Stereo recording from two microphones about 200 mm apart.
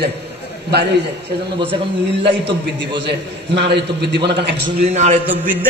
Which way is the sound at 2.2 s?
60° right (ahead or behind).